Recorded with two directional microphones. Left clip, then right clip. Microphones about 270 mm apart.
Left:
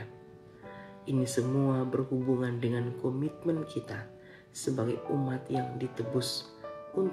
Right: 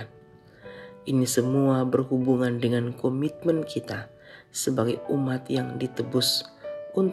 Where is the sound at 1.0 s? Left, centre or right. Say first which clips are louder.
Right 7 dB; right.